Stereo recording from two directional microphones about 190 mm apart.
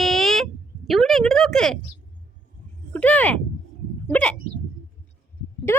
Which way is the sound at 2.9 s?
5° left (ahead or behind).